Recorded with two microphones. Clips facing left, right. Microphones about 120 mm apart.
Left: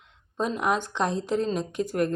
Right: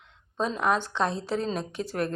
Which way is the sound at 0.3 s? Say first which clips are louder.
Even; 15° left (ahead or behind).